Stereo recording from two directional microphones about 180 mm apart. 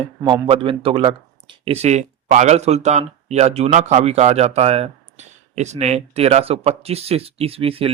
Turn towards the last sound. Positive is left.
turn(degrees=-30)  # may be behind; listen again after turning